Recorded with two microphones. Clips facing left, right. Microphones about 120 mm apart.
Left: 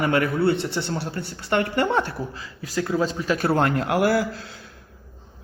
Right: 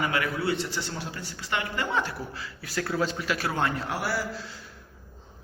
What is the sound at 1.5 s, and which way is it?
Speech, 50° left (ahead or behind).